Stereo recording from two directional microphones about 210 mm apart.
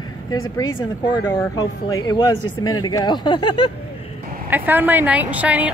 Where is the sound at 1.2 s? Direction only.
15° left (ahead or behind).